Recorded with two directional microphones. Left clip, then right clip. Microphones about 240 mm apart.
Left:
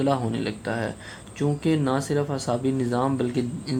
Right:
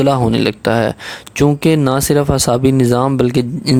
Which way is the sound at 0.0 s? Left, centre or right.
Right.